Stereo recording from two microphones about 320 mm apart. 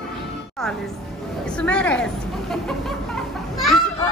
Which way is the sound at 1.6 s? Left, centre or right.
Centre.